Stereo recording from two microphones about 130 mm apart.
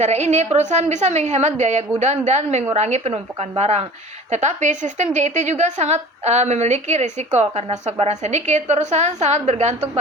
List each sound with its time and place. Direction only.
0.0 s a woman's voice: 60° right (ahead or behind)
4.3 s a woman's voice: 65° right (ahead or behind)